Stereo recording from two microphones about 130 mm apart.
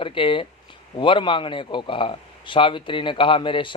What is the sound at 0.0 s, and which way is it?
A man's voice, 40° left (ahead or behind).